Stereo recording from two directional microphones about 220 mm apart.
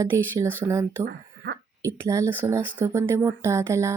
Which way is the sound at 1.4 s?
50° right (ahead or behind).